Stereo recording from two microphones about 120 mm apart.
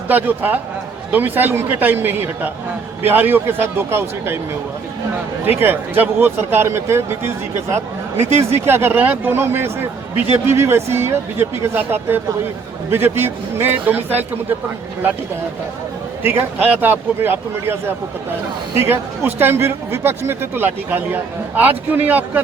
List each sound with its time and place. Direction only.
0.1 s speech: 15° right (ahead or behind)
5.5 s speech: 15° right (ahead or behind)
16.2 s speech: 15° right (ahead or behind)